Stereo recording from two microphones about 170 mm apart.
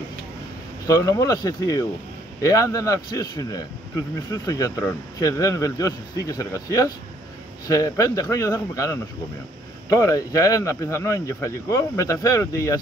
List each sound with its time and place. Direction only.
0.8 s speech: 20° left (ahead or behind)